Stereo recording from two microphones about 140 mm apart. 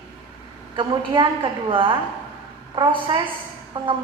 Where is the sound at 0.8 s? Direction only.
35° right (ahead or behind).